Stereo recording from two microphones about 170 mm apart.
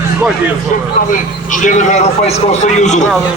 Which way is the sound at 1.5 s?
45° left (ahead or behind).